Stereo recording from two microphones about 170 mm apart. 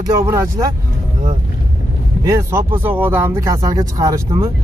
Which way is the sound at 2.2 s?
20° right (ahead or behind).